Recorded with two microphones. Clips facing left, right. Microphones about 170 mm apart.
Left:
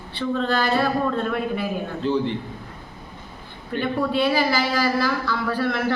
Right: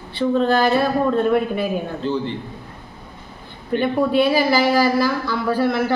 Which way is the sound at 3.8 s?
15° right (ahead or behind).